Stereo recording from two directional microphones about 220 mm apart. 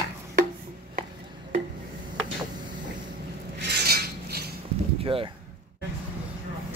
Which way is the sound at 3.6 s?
45° right (ahead or behind).